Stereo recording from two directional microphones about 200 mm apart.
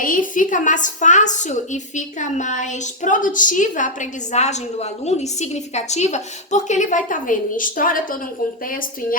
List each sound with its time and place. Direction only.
0.0 s a woman's voice: 40° left (ahead or behind)